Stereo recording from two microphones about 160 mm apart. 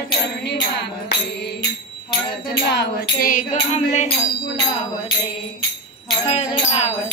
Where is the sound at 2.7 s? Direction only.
75° left (ahead or behind); by 3.4 s 60° left (ahead or behind).